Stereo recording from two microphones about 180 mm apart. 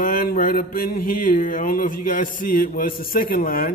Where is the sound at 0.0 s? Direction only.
55° left (ahead or behind).